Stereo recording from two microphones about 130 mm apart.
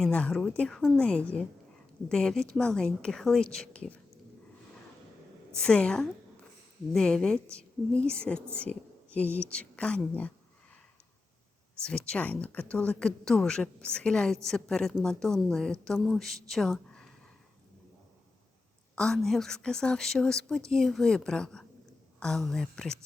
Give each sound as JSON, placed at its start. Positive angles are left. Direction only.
{"t": 0.0, "sound": "speech", "side_deg": 10}
{"t": 5.5, "sound": "a woman's voice", "side_deg": 5}
{"t": 7.4, "sound": "a woman's voice", "side_deg": -20}
{"t": 8.0, "sound": "speech", "side_deg": 10}
{"t": 11.8, "sound": "a woman's voice", "side_deg": 10}
{"t": 18.9, "sound": "a woman's voice", "side_deg": 5}